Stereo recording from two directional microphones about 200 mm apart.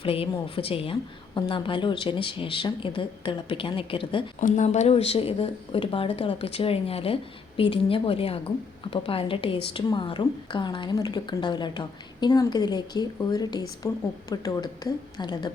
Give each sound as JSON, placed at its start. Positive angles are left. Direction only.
{"t": 0.0, "sound": "a woman's voice", "side_deg": 25}
{"t": 4.4, "sound": "a woman's voice", "side_deg": 40}